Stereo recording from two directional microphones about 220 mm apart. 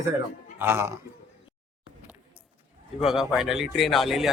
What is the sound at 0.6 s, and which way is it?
Speech, 10° right (ahead or behind).